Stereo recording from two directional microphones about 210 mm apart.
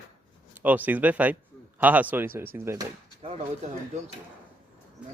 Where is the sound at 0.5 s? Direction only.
10° right (ahead or behind).